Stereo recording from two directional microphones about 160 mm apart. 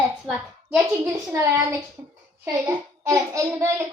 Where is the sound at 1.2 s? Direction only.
20° right (ahead or behind).